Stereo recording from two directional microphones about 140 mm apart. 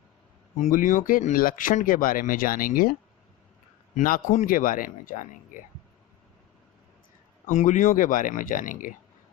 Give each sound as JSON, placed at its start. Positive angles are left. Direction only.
{"t": 0.6, "sound": "speech", "side_deg": 65}
{"t": 3.9, "sound": "speech", "side_deg": 75}
{"t": 7.4, "sound": "speech", "side_deg": 60}